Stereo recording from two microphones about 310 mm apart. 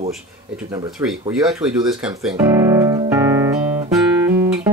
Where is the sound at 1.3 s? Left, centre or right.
Centre.